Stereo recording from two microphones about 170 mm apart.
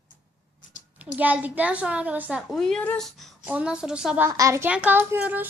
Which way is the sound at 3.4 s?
5° right (ahead or behind).